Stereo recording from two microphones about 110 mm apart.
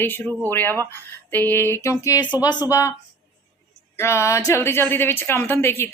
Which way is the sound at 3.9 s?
25° left (ahead or behind).